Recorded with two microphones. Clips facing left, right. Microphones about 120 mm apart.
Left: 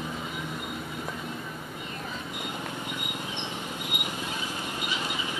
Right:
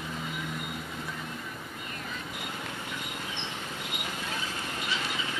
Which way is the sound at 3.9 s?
20° left (ahead or behind).